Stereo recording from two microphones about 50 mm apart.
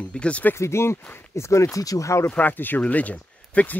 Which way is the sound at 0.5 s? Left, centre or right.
Left.